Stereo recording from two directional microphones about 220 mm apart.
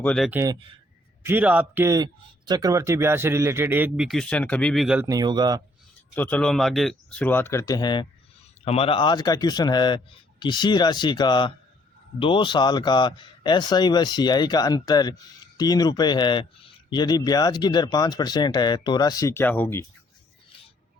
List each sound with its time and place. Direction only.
0.0 s speech: 5° left (ahead or behind)
0.3 s speech: 10° right (ahead or behind)
6.1 s speech: 10° left (ahead or behind)